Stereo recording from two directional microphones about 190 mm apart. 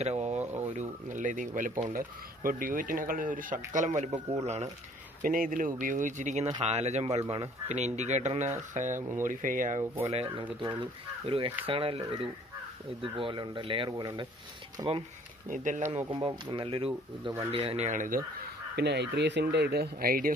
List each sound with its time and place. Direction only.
0.0 s a sound: 35° right (ahead or behind)
0.7 s speech: 40° right (ahead or behind)
5.2 s speech: 45° right (ahead or behind)
10.0 s speech: 30° right (ahead or behind)
15.5 s speech: 40° right (ahead or behind)
16.1 s speech: 25° right (ahead or behind); by 18.2 s 45° right (ahead or behind)
18.8 s speech: 60° right (ahead or behind)